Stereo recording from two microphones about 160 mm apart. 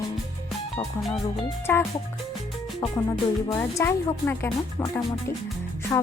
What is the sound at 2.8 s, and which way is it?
Music, 5° left (ahead or behind).